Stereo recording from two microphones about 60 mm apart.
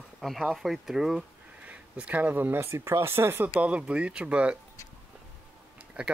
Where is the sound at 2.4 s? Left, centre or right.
Right.